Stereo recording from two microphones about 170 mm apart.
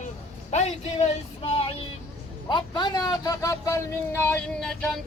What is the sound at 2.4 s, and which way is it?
A man's voice, 25° left (ahead or behind).